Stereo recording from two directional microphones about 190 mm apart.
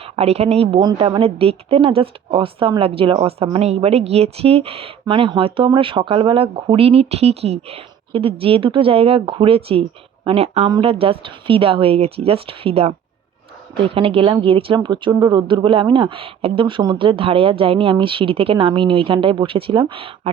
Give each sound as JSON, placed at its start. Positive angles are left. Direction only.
{"t": 0.0, "sound": "a woman's voice", "side_deg": -35}